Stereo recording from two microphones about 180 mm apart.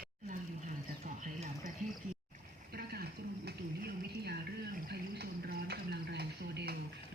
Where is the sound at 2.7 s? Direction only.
60° right (ahead or behind).